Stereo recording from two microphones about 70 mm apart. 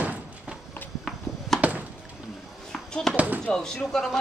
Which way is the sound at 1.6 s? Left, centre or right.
Right.